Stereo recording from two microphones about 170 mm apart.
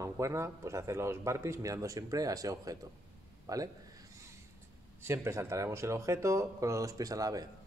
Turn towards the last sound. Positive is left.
turn(degrees=-20)  # may be behind; listen again after turning